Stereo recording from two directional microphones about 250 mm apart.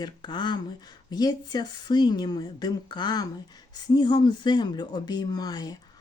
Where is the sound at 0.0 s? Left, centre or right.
Centre.